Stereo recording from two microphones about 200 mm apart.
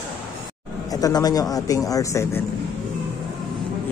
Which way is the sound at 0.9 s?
20° left (ahead or behind).